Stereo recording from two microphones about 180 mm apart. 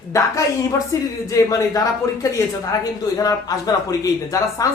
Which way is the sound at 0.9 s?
15° left (ahead or behind).